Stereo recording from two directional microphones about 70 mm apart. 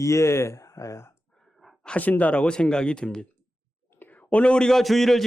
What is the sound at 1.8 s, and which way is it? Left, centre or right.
Speech, centre.